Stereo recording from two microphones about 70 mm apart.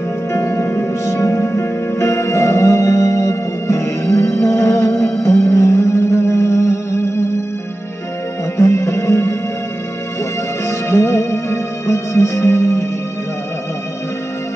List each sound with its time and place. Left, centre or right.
0.3 s music: left
1.0 s music: left
8.5 s music: left
10.7 s music: left